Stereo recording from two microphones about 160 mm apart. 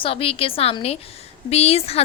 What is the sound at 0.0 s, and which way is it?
A woman's voice, 35° left (ahead or behind).